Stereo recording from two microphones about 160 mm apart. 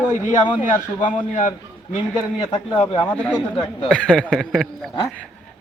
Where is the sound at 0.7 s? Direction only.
50° left (ahead or behind).